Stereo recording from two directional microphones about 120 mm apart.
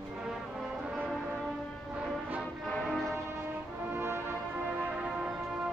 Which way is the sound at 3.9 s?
20° right (ahead or behind).